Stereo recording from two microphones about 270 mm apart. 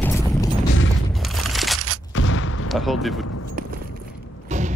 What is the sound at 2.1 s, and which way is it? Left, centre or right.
Artillery fire, left.